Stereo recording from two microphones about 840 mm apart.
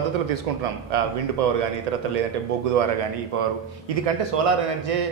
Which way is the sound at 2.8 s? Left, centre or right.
Right.